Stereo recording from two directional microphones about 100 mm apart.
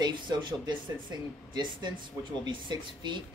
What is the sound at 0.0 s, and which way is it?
Speech, 50° right (ahead or behind).